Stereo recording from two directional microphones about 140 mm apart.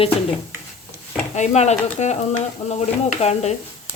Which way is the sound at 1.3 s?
55° left (ahead or behind).